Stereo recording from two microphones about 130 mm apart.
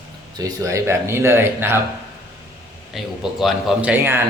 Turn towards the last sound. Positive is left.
turn(degrees=-15)  # may be behind; listen again after turning